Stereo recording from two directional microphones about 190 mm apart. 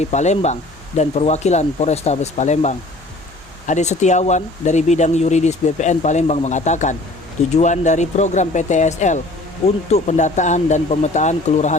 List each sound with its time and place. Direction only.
0.0 s speech: 35° left (ahead or behind)